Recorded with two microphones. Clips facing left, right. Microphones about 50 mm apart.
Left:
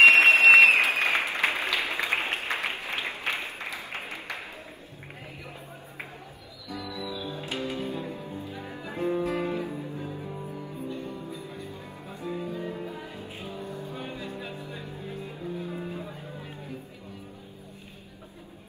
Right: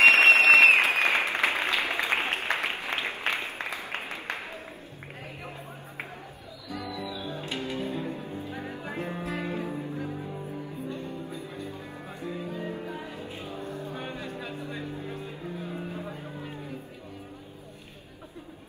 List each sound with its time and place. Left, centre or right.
0.0 s applause: right
6.7 s music: right
11.2 s music: right